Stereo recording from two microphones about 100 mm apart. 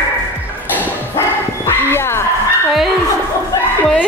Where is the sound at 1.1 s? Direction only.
25° left (ahead or behind).